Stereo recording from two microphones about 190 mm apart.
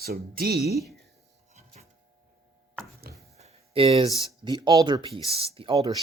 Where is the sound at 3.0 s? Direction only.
55° right (ahead or behind).